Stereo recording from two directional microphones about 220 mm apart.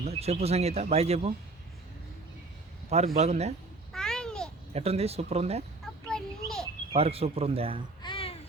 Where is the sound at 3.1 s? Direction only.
30° right (ahead or behind).